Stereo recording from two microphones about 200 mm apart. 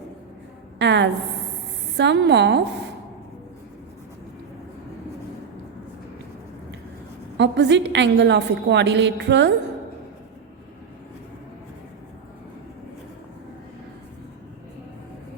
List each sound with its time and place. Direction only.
0.8 s a woman's voice: 60° right (ahead or behind)
7.3 s a woman's voice: 60° right (ahead or behind)